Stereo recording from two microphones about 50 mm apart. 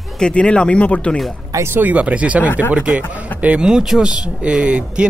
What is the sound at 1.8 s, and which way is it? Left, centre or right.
Speech, right.